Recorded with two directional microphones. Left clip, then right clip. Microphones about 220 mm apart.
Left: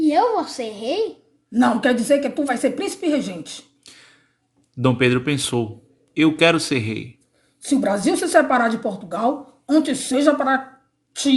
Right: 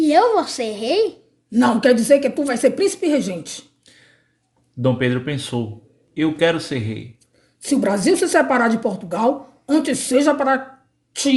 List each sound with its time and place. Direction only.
0.0 s a woman's voice: 35° right (ahead or behind)
3.8 s a sound: 40° left (ahead or behind)
4.8 s speech: 40° left (ahead or behind)
7.6 s a woman's voice: 40° right (ahead or behind)